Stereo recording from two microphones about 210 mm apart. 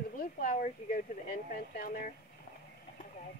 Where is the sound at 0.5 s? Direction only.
35° left (ahead or behind).